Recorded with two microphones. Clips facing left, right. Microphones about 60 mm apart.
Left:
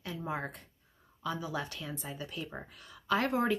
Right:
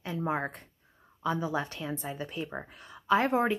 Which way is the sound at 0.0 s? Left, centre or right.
Right.